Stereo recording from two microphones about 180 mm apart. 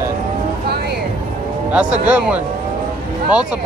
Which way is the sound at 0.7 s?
65° right (ahead or behind).